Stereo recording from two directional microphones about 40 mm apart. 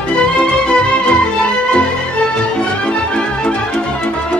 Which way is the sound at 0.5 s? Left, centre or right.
Left.